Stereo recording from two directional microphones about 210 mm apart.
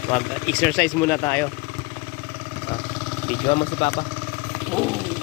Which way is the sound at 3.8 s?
25° left (ahead or behind).